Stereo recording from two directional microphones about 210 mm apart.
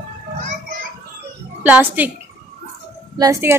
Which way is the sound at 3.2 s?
15° right (ahead or behind).